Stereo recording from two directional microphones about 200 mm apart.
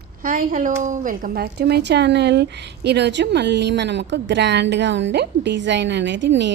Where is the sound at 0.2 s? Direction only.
45° right (ahead or behind).